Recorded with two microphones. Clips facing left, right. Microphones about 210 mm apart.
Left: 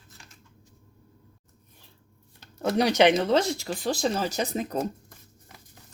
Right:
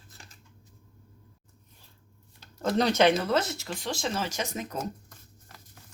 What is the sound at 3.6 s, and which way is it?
Speech, 35° left (ahead or behind).